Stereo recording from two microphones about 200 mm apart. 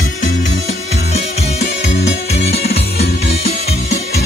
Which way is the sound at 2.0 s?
55° left (ahead or behind).